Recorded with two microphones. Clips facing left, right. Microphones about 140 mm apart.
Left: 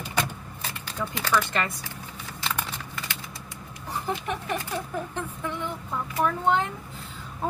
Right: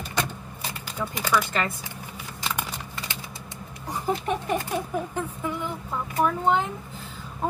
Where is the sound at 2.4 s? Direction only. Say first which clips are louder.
Right 1 dB; 10° right (ahead or behind).